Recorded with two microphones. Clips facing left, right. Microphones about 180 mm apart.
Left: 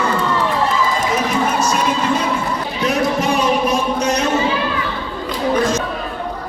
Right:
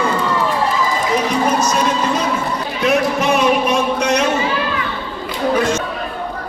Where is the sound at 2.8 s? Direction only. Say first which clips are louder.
Right 2 dB; 35° left (ahead or behind).